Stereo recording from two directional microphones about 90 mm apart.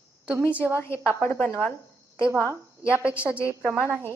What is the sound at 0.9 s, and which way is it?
Speech, 30° left (ahead or behind).